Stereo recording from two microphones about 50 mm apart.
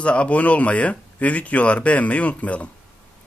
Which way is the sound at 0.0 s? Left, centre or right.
Left.